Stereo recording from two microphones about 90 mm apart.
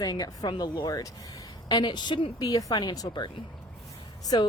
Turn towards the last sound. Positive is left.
turn(degrees=45)  # may be behind; listen again after turning